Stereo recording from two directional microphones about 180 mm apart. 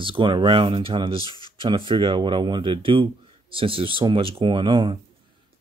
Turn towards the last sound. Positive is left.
turn(degrees=-25)  # may be behind; listen again after turning